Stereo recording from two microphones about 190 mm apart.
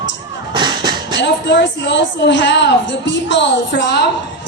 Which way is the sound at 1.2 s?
65° left (ahead or behind).